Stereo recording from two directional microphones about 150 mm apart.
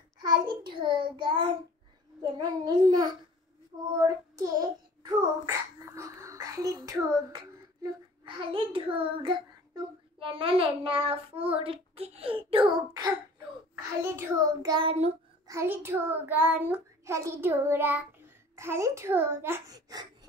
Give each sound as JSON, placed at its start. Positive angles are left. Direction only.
{"t": 0.2, "sound": "a child's voice", "side_deg": -30}
{"t": 2.3, "sound": "child singing", "side_deg": -25}
{"t": 4.0, "sound": "a child's voice", "side_deg": -25}
{"t": 13.7, "sound": "child singing", "side_deg": -20}
{"t": 14.9, "sound": "a child's voice", "side_deg": -40}
{"t": 15.4, "sound": "child singing", "side_deg": -15}
{"t": 19.7, "sound": "speech", "side_deg": -25}